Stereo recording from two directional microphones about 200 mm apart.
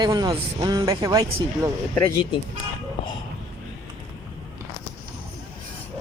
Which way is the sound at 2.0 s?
25° left (ahead or behind).